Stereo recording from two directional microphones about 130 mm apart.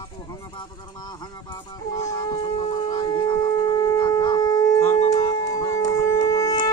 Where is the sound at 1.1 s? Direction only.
30° left (ahead or behind).